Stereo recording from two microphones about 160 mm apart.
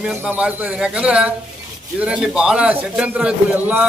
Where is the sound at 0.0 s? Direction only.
10° right (ahead or behind).